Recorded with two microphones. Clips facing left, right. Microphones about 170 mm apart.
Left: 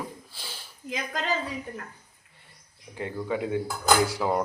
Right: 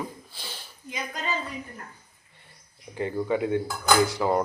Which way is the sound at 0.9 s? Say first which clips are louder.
Left 2 dB; 90° left.